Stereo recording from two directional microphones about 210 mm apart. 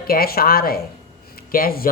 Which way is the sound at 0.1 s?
45° left (ahead or behind).